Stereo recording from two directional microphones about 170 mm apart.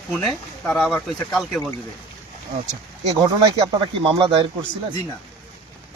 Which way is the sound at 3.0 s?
30° right (ahead or behind).